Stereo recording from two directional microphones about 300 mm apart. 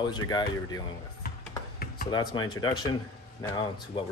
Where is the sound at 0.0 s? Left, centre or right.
Centre.